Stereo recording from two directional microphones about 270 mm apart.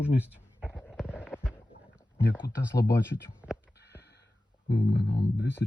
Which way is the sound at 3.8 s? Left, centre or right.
Left.